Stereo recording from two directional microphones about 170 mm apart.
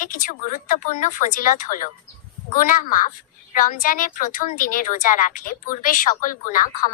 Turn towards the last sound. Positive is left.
turn(degrees=55)  # may be behind; listen again after turning